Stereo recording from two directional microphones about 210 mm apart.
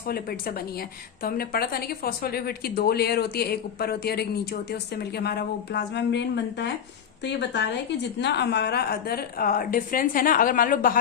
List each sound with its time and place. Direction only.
0.1 s a woman's voice: 45° left (ahead or behind)